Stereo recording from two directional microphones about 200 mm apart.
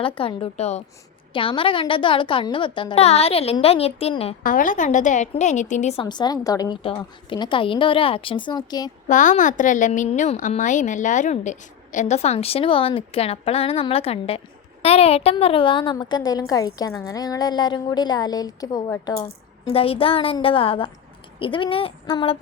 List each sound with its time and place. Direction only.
0.0 s a woman's voice: 25° left (ahead or behind)
4.4 s a woman's voice: 40° left (ahead or behind); by 8.9 s 20° left (ahead or behind)
9.0 s a woman's voice: 40° left (ahead or behind); by 19.2 s 15° left (ahead or behind)
19.6 s a woman's voice: 30° left (ahead or behind)